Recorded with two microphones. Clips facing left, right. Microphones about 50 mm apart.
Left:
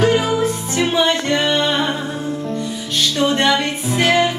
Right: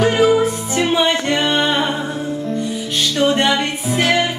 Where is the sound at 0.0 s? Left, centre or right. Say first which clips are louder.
Right 2 dB; centre.